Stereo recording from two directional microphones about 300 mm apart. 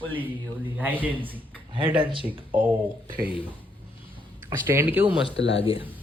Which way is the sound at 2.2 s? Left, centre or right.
Centre.